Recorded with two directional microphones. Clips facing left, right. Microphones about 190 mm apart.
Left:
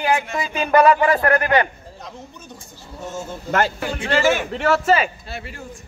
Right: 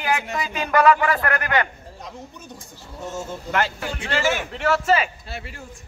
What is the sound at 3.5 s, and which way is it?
A man's voice, 45° left (ahead or behind).